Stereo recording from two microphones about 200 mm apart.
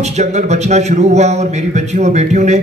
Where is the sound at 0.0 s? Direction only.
35° right (ahead or behind).